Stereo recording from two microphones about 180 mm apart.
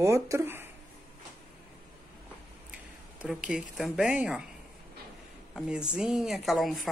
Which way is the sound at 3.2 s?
5° right (ahead or behind).